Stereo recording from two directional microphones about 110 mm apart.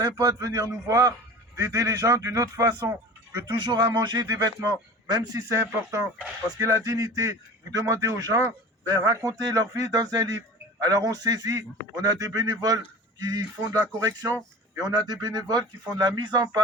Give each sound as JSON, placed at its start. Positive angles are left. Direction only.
{"t": 0.0, "sound": "a man's voice", "side_deg": -30}
{"t": 3.4, "sound": "a man's voice", "side_deg": -45}